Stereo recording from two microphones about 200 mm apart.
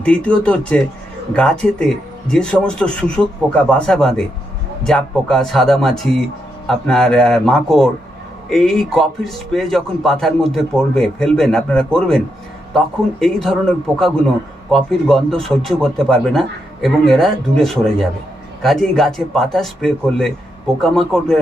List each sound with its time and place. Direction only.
0.0 s speech: 5° left (ahead or behind)